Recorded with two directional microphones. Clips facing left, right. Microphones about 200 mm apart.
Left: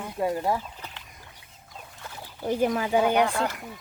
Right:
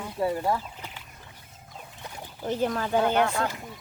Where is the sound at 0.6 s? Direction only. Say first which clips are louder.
Even; 10° right (ahead or behind).